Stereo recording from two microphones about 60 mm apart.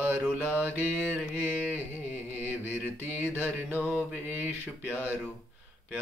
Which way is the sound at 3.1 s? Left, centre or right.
Right.